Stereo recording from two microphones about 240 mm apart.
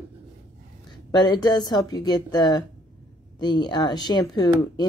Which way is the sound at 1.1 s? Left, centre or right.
Centre.